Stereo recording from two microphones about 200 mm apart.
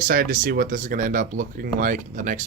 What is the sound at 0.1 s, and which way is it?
Speech, 45° right (ahead or behind).